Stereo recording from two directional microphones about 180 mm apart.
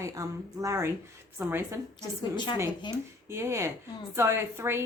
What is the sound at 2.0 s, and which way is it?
Speech, 25° left (ahead or behind).